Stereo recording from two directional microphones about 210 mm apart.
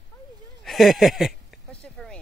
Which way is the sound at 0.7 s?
Centre (ahead or behind).